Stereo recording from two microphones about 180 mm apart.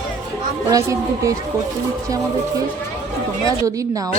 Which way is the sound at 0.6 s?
20° right (ahead or behind).